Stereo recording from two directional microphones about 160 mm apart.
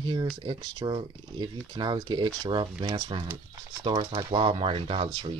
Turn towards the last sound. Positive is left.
turn(degrees=-35)  # may be behind; listen again after turning